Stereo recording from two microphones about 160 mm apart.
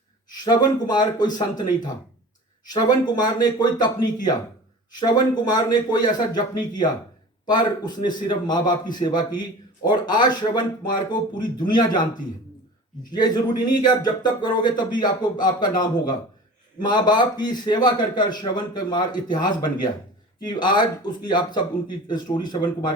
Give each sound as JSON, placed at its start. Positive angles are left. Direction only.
{"t": 0.3, "sound": "speech", "side_deg": 25}
{"t": 13.1, "sound": "speech", "side_deg": 25}
{"t": 20.5, "sound": "speech", "side_deg": 30}